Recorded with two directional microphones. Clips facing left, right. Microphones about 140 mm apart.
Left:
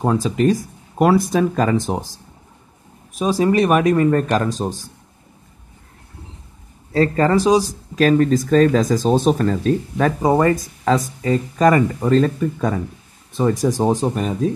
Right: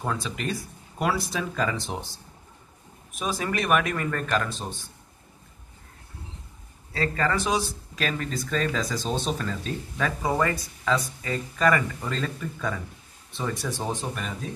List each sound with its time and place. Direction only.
0.0 s speech: 40° left (ahead or behind)
6.9 s speech: 40° left (ahead or behind)